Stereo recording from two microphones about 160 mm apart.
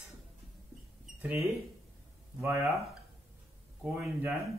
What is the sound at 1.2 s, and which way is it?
Speech, 15° right (ahead or behind).